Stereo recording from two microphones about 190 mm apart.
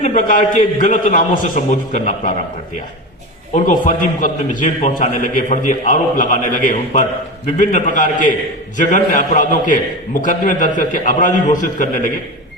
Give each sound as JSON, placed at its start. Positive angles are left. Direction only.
{"t": 0.0, "sound": "a man's voice", "side_deg": 40}
{"t": 3.5, "sound": "a man's voice", "side_deg": 45}